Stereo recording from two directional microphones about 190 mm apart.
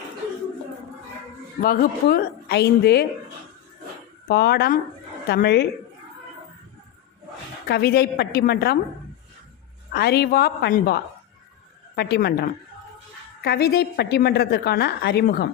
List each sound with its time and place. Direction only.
1.6 s a woman's voice: 50° left (ahead or behind)
4.3 s a woman's voice: 55° left (ahead or behind)
7.7 s a woman's voice: 55° left (ahead or behind)
9.9 s a woman's voice: 55° left (ahead or behind)